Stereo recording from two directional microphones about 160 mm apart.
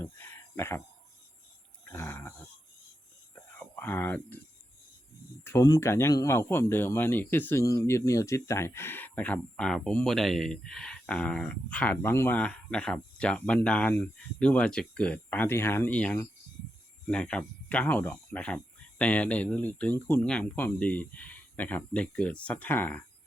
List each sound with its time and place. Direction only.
0.0 s a sound: 15° left (ahead or behind)
1.9 s speech: 15° left (ahead or behind)
3.6 s speech: 15° left (ahead or behind)
5.4 s speech: 15° left (ahead or behind)